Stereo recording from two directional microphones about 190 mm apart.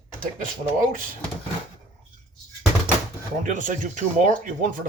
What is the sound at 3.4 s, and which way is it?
Speech, 40° right (ahead or behind).